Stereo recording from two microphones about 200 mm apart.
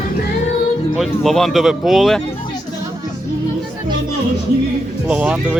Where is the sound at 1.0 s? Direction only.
Centre (ahead or behind).